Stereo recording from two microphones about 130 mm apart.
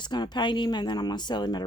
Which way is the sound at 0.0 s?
35° left (ahead or behind).